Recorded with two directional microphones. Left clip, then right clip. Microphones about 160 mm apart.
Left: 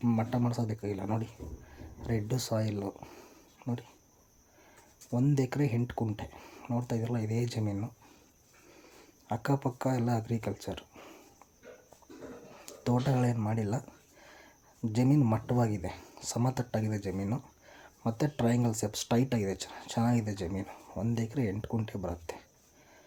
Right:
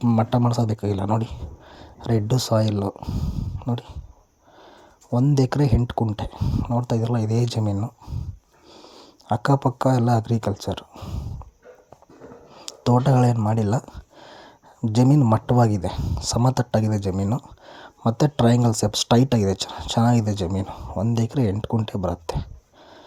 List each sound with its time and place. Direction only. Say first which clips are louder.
0.0 s speech: right 10 dB; 35° right (ahead or behind)
5.1 s speech: right 9 dB; 35° right (ahead or behind)
8.7 s a sound: right 12 dB; 25° right (ahead or behind)
9.2 s speech: right 11 dB; 35° right (ahead or behind)
12.8 s speech: right 11 dB; 35° right (ahead or behind)